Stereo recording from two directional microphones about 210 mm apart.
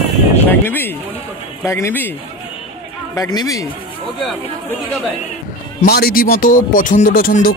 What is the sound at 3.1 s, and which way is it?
Speech, 15° left (ahead or behind).